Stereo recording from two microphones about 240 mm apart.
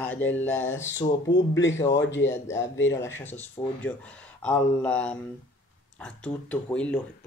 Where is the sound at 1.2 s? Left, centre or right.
Left.